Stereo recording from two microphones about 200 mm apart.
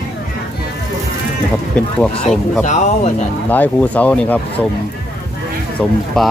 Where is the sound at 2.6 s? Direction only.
35° left (ahead or behind).